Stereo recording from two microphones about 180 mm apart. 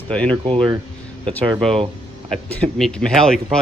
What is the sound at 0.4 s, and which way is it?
Speech, 25° right (ahead or behind).